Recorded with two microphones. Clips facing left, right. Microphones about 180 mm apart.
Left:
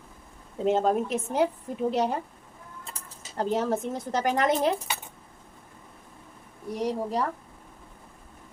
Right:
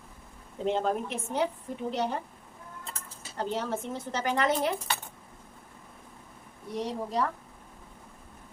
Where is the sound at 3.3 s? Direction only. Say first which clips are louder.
Left 5 dB; 40° left (ahead or behind).